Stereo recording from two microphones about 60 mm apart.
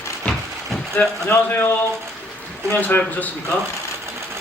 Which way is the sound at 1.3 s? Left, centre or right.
Left.